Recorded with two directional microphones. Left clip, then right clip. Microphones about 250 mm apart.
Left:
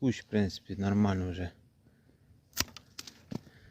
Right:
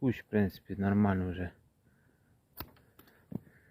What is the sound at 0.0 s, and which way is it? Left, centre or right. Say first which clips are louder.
Speech: even; centre.